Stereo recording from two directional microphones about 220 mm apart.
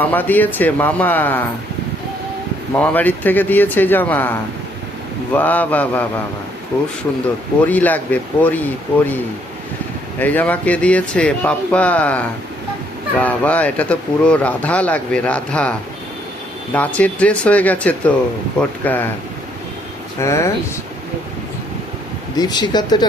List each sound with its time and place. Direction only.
0.0 s speech: 10° left (ahead or behind)
2.7 s speech: 5° left (ahead or behind)
7.6 s speech: 5° left (ahead or behind)
10.2 s speech: 10° left (ahead or behind)
16.7 s speech: 5° left (ahead or behind)
20.1 s speech: 15° left (ahead or behind)
22.4 s speech: 20° left (ahead or behind)